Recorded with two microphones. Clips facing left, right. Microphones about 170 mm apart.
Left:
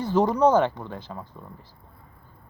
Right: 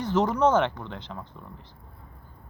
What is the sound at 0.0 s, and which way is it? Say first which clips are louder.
Speech: left 2 dB; 15° left (ahead or behind).